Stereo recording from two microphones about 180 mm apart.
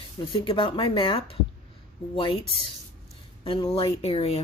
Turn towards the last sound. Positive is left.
turn(degrees=30)  # may be behind; listen again after turning